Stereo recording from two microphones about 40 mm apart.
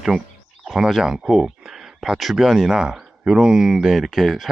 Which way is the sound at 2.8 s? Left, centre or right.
Centre.